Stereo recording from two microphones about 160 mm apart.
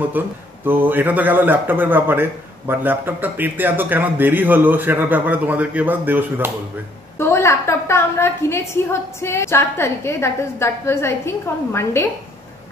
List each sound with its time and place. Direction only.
0.2 s a man's voice: 10° right (ahead or behind)
7.2 s a woman's voice: 15° left (ahead or behind)